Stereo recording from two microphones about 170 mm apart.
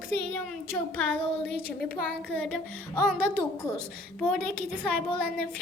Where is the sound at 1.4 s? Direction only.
70° left (ahead or behind).